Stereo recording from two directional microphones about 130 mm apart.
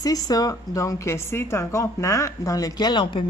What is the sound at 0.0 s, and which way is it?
Speech, 30° left (ahead or behind).